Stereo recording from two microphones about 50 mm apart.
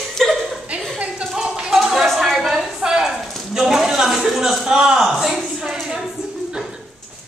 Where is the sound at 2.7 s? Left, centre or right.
Centre.